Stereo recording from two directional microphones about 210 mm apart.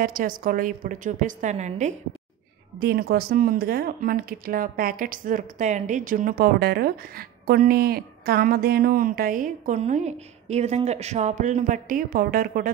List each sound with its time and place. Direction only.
0.0 s a woman's voice: 40° right (ahead or behind)
2.8 s speech: 50° right (ahead or behind)